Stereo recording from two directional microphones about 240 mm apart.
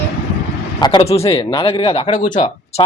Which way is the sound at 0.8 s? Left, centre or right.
Centre.